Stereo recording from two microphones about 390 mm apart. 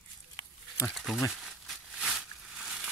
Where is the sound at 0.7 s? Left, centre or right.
Centre.